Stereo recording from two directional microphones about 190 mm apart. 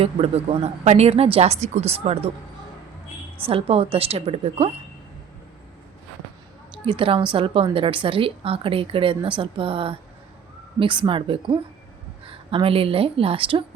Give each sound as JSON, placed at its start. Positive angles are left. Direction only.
{"t": 0.0, "sound": "speech", "side_deg": -30}
{"t": 3.4, "sound": "speech", "side_deg": -30}
{"t": 6.8, "sound": "a woman's voice", "side_deg": -25}